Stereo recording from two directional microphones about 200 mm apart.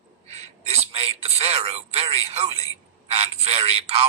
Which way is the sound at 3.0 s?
30° right (ahead or behind).